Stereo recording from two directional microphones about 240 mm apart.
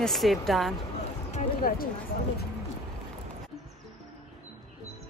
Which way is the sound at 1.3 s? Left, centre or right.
Left.